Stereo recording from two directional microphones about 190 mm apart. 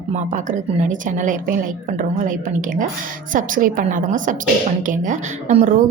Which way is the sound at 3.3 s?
45° right (ahead or behind).